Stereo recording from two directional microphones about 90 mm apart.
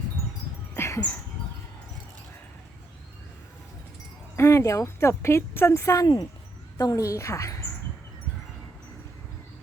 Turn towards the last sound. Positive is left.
turn(degrees=35)  # may be behind; listen again after turning